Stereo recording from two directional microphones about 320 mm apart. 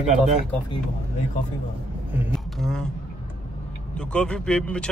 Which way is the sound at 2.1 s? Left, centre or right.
Centre.